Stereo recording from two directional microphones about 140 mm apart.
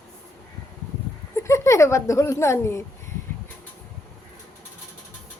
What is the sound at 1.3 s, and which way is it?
Speech, 20° left (ahead or behind).